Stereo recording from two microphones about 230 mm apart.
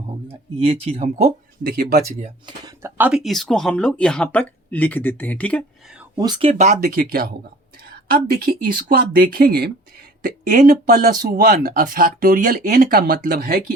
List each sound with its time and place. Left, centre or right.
0.3 s speech: right
2.6 s speech: centre
6.1 s speech: centre
6.8 s speech: right